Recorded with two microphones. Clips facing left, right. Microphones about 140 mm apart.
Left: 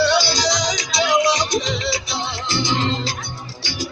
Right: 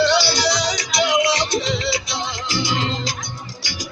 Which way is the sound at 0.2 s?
15° left (ahead or behind).